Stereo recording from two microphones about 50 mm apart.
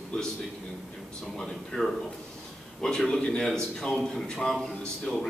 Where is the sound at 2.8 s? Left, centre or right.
Centre.